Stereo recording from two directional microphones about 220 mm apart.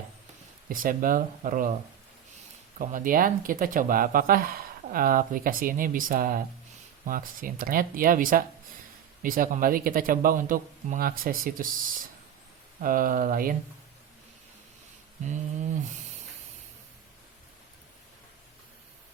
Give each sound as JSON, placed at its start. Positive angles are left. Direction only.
{"t": 0.7, "sound": "speech", "side_deg": -40}
{"t": 2.7, "sound": "speech", "side_deg": -35}
{"t": 12.8, "sound": "speech", "side_deg": -40}
{"t": 15.2, "sound": "speech", "side_deg": -35}